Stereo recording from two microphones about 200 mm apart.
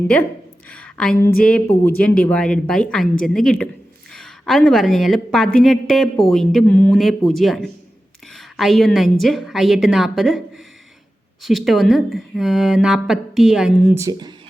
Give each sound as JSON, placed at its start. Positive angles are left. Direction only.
{"t": 0.7, "sound": "a woman's voice", "side_deg": 5}
{"t": 11.4, "sound": "speech", "side_deg": 0}
{"t": 13.9, "sound": "speech", "side_deg": -15}